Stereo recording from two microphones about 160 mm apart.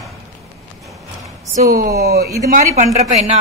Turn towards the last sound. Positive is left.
turn(degrees=-45)  # may be behind; listen again after turning